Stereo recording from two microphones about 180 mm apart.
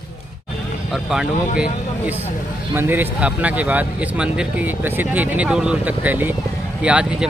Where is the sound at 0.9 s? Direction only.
5° right (ahead or behind).